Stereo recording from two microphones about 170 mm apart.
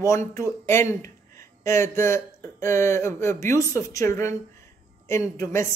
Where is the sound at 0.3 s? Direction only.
15° left (ahead or behind).